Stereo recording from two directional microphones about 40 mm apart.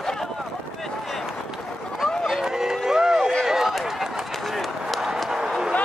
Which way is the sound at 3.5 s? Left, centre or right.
Centre.